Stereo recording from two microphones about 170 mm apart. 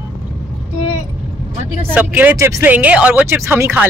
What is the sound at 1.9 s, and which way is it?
Speech, 10° right (ahead or behind).